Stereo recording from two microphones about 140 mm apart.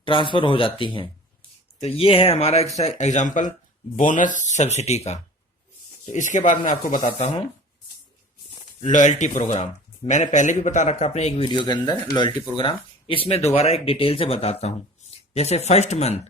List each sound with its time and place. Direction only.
0.0 s speech: 35° left (ahead or behind)
6.1 s speech: 65° left (ahead or behind)
8.8 s speech: 60° left (ahead or behind)
11.4 s speech: 35° left (ahead or behind); by 16.2 s 50° left (ahead or behind)